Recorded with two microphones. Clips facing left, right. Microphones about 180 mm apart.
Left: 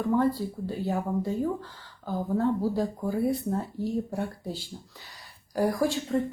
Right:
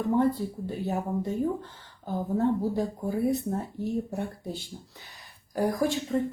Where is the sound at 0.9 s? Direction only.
20° right (ahead or behind).